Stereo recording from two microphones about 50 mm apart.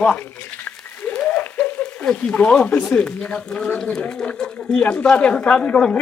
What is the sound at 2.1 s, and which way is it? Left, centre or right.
Speech, left.